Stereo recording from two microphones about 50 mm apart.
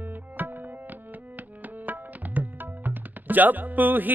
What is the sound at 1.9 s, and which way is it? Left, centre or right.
Speech, right.